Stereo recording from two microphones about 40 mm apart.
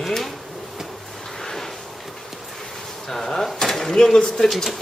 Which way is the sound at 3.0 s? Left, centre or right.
Centre.